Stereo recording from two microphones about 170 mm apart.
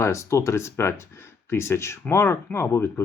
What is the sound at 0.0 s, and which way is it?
Speech, 15° left (ahead or behind).